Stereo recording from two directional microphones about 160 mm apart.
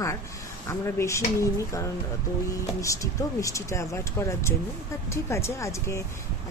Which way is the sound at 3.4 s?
20° left (ahead or behind).